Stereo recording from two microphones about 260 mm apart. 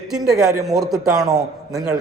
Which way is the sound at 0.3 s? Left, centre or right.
Centre.